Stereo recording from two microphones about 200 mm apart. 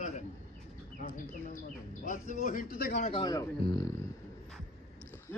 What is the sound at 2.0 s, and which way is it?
Speech, 40° left (ahead or behind).